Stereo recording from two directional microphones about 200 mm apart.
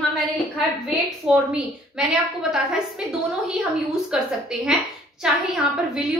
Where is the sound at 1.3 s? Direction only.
5° right (ahead or behind).